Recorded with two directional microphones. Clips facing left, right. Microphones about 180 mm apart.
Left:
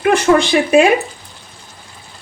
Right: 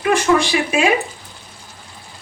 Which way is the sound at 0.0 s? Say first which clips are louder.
Left 3 dB; 60° left (ahead or behind).